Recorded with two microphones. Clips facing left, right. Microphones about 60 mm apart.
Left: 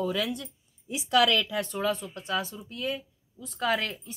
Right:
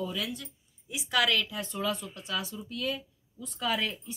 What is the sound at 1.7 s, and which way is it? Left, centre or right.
Speech, left.